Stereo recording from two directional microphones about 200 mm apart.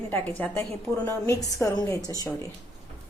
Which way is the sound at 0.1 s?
5° left (ahead or behind).